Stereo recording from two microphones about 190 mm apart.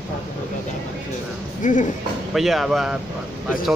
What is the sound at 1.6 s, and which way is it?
Speech, 40° left (ahead or behind).